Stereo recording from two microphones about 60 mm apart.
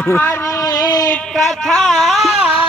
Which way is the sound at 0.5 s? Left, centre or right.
Left.